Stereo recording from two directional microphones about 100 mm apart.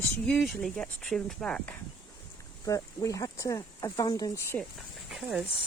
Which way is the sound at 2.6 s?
35° left (ahead or behind).